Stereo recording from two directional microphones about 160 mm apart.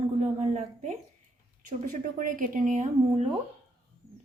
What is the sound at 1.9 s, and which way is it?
A woman's voice, 60° right (ahead or behind).